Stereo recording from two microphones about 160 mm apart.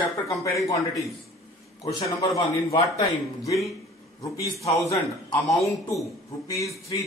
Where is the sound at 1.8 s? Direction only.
20° left (ahead or behind).